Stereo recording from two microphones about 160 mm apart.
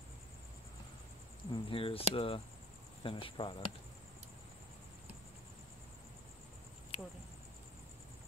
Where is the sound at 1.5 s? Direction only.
35° left (ahead or behind).